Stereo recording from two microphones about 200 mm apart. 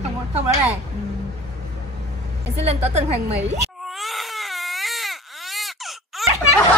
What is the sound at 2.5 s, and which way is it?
A woman's voice, 30° right (ahead or behind).